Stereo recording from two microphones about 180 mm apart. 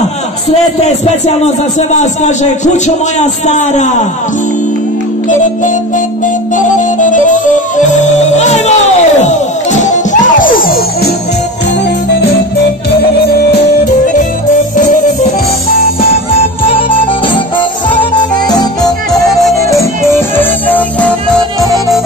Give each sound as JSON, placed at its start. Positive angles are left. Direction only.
{"t": 0.5, "sound": "a man's voice", "side_deg": 35}
{"t": 5.3, "sound": "music", "side_deg": 45}
{"t": 12.9, "sound": "music", "side_deg": 60}
{"t": 16.0, "sound": "music", "side_deg": 30}
{"t": 19.1, "sound": "music", "side_deg": 0}
{"t": 20.1, "sound": "music", "side_deg": 10}